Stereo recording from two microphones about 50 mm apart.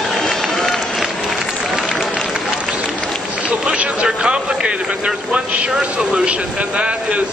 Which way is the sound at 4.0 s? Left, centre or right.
Centre.